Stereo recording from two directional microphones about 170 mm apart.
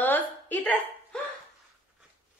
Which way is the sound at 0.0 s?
10° left (ahead or behind).